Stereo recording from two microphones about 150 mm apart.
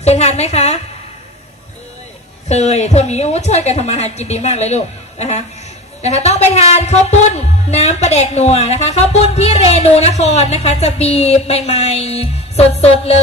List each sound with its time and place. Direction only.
0.0 s a woman's voice: 45° left (ahead or behind)
2.4 s a woman's voice: 50° left (ahead or behind)